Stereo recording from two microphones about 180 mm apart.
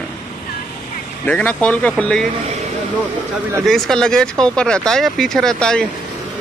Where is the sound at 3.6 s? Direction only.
Centre (ahead or behind).